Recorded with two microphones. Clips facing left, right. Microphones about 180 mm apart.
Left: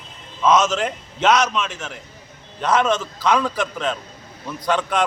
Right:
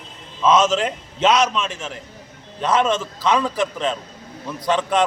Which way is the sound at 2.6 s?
Centre (ahead or behind).